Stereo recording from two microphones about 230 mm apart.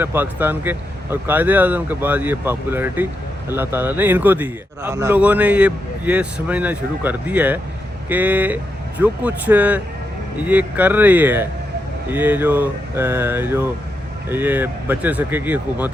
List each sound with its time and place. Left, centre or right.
0.0 s a man's voice: centre